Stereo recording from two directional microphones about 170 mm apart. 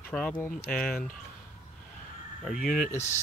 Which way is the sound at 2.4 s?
Centre (ahead or behind).